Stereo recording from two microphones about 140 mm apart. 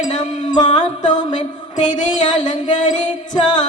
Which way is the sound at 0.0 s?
60° left (ahead or behind).